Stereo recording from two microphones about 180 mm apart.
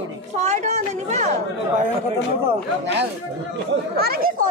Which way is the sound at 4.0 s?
55° right (ahead or behind).